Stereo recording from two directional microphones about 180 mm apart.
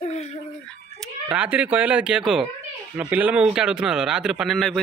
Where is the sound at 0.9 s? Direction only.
5° right (ahead or behind).